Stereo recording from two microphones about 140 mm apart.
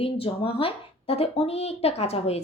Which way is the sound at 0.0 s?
40° left (ahead or behind).